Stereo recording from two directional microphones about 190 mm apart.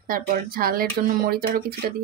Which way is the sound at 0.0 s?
50° right (ahead or behind).